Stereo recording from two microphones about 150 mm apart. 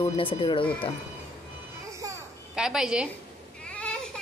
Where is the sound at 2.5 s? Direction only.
5° right (ahead or behind).